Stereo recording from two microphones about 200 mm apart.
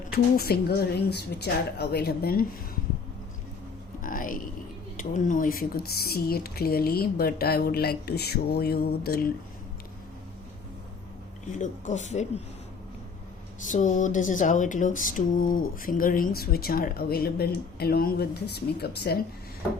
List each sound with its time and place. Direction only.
0.3 s speech: 50° left (ahead or behind)
4.0 s a sound: 45° left (ahead or behind)
5.1 s speech: 40° left (ahead or behind)
11.5 s speech: 40° left (ahead or behind)
13.7 s speech: 40° left (ahead or behind)